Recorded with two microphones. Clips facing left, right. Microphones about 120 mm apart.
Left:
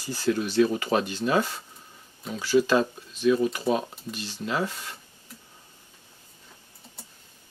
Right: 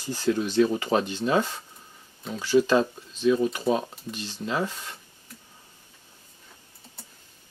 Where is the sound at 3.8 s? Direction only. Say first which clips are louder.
Even; 10° left (ahead or behind).